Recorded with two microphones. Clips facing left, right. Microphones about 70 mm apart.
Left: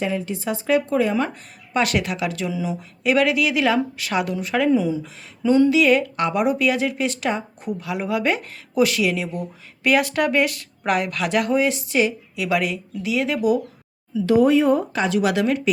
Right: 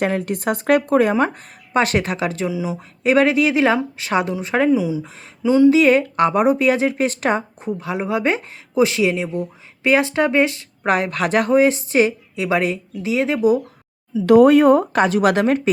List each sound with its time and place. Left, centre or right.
0.0 s speech: right
1.1 s speech: right
2.5 s speech: centre
3.0 s speech: right
4.7 s speech: centre
5.6 s speech: right
14.3 s speech: right